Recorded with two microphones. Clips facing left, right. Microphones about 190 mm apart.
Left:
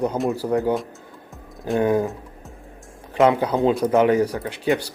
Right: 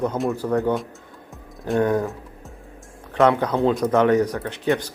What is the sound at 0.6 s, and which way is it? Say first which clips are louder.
Speech: even; centre (ahead or behind).